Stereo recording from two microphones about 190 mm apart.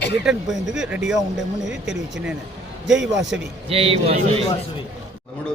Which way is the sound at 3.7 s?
30° right (ahead or behind).